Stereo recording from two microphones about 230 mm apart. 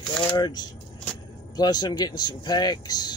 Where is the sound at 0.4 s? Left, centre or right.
Centre.